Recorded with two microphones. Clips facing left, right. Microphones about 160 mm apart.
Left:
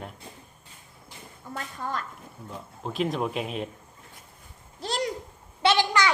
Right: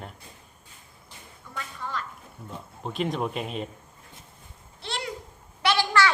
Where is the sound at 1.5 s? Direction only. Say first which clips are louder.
Left 2 dB; 45° left (ahead or behind).